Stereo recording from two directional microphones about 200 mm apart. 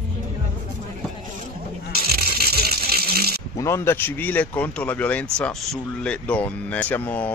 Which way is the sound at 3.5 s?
15° left (ahead or behind).